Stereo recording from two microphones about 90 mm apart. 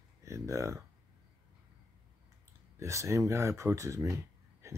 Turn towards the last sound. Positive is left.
turn(degrees=-35)  # may be behind; listen again after turning